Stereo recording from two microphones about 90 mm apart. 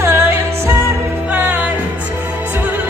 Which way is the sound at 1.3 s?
15° right (ahead or behind).